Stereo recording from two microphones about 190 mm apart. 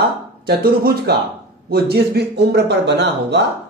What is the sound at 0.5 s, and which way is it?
Speech, 55° right (ahead or behind).